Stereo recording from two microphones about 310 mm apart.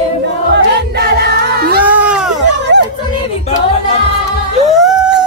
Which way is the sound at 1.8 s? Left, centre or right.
Centre.